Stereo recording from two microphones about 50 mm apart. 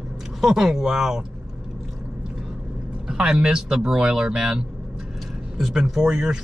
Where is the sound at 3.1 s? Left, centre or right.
Right.